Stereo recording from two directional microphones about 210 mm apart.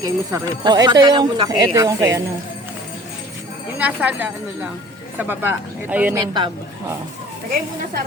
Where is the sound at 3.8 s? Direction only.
5° right (ahead or behind).